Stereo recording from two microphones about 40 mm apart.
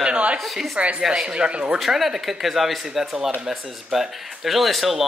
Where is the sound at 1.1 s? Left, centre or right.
Right.